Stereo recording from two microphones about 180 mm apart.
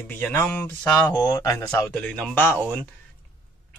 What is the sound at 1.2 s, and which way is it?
Speech, 20° left (ahead or behind).